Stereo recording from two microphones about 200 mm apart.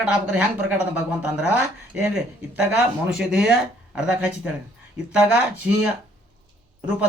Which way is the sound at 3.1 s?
5° right (ahead or behind).